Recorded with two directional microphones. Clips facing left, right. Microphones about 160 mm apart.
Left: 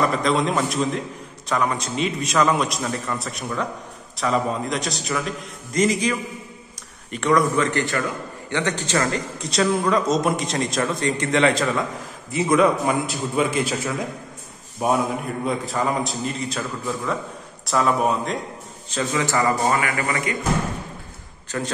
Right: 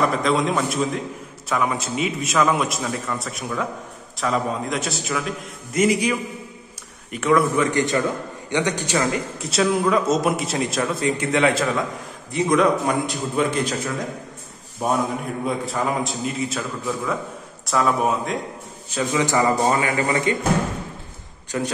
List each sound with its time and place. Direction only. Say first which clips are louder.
0.0 s a man's voice: even; centre (ahead or behind)
18.9 s a man's voice: right 2 dB; 15° right (ahead or behind)
21.5 s a man's voice: right 2 dB; 10° right (ahead or behind)